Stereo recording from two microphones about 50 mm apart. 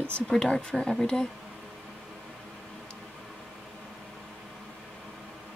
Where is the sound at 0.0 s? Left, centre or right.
Centre.